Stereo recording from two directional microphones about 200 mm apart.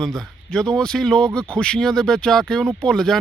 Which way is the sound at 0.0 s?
Centre (ahead or behind).